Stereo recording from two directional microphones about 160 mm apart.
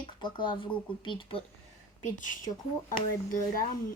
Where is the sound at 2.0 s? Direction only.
55° left (ahead or behind).